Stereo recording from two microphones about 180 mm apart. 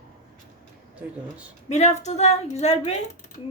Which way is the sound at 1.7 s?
40° left (ahead or behind).